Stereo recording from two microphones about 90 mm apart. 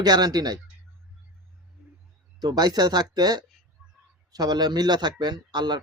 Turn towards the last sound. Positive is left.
turn(degrees=-55)  # may be behind; listen again after turning